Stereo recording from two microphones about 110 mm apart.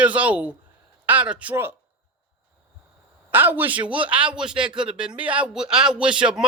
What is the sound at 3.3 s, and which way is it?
A man's voice, 15° right (ahead or behind).